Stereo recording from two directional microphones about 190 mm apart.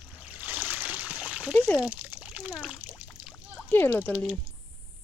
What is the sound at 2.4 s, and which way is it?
Speech, 5° right (ahead or behind).